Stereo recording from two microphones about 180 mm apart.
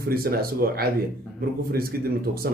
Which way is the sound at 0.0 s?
55° right (ahead or behind).